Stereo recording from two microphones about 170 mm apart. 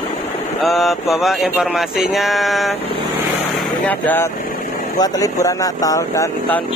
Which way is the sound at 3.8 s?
10° left (ahead or behind).